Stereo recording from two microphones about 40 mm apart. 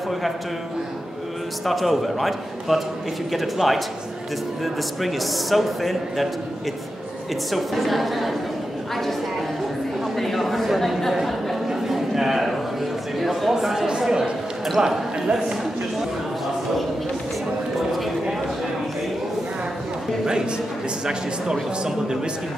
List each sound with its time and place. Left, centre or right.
1.7 s speech: centre
5.0 s speech: centre
7.5 s speech: centre
10.1 s a sound: centre
14.8 s speech: right
17.7 s a sound: centre
21.0 s speech: centre